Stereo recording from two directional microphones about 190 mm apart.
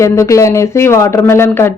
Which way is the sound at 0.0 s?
15° left (ahead or behind).